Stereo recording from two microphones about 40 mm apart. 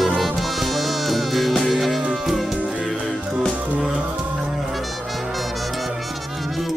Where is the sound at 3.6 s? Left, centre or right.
Right.